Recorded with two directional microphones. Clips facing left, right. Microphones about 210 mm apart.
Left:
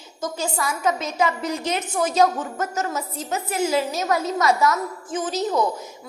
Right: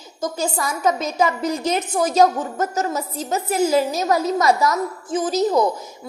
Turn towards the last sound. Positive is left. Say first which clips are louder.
# right 5 dB
turn(degrees=-40)  # may be behind; listen again after turning